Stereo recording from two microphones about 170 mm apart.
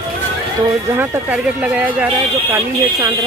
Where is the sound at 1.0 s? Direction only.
10° right (ahead or behind).